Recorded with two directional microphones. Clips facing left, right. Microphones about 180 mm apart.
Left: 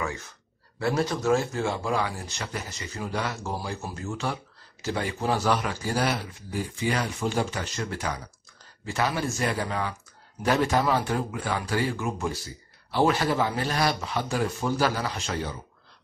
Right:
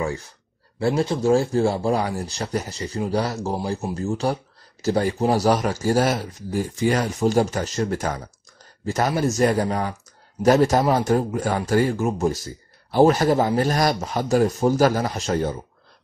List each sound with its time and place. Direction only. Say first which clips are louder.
0.0 s a man's voice: right 6 dB; 30° right (ahead or behind)